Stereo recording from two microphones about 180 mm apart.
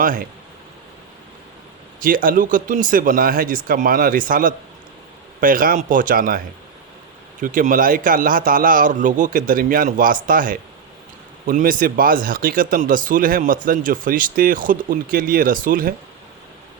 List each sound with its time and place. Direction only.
0.0 s speech: 50° right (ahead or behind)
2.0 s speech: 50° right (ahead or behind)
7.4 s speech: 50° right (ahead or behind)